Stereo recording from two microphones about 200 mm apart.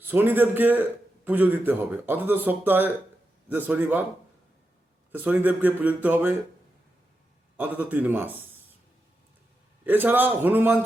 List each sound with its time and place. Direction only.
0.1 s a man's voice: 10° right (ahead or behind)
5.2 s a man's voice: 10° right (ahead or behind)
7.5 s a man's voice: 10° right (ahead or behind)
9.8 s a man's voice: 10° right (ahead or behind)